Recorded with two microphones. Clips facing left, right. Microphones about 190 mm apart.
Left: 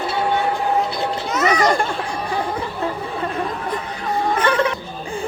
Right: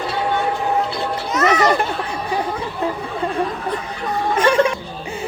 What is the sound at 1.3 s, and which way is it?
Children playing, centre (ahead or behind).